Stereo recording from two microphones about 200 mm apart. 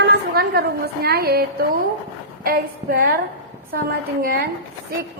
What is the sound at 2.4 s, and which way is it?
A woman's voice, 45° right (ahead or behind).